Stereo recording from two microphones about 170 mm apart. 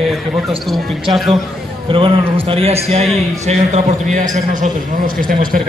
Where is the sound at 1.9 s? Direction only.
30° right (ahead or behind).